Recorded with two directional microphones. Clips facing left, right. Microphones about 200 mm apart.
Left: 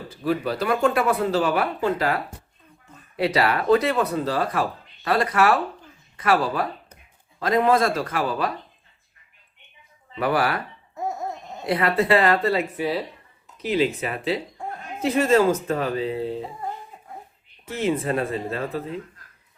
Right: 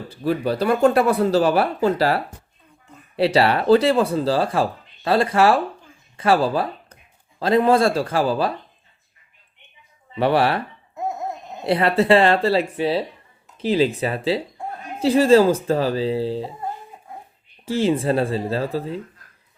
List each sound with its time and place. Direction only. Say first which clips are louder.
0.3 s speech: right 3 dB; 30° right (ahead or behind)
10.2 s speech: right 4 dB; 30° right (ahead or behind)
11.6 s speech: right 3 dB; 30° right (ahead or behind)
17.7 s speech: right 4 dB; 30° right (ahead or behind)